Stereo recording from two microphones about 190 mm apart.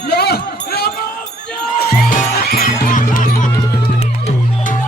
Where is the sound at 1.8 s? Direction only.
50° left (ahead or behind).